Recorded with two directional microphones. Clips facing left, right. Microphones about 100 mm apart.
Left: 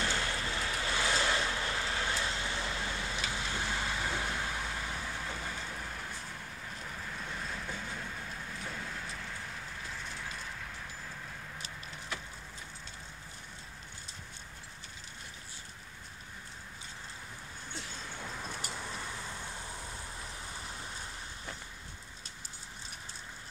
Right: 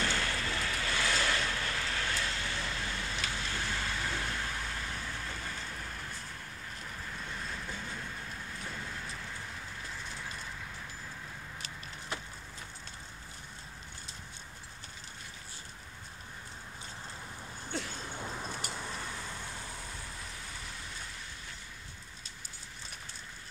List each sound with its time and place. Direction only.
0.0 s vehicle: 20° left (ahead or behind); by 10.7 s 5° right (ahead or behind)
17.9 s vehicle: 15° right (ahead or behind)
19.0 s vehicle: 15° left (ahead or behind)